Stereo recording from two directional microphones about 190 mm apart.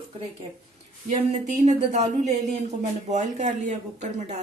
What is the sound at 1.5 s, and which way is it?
Speech, 40° right (ahead or behind).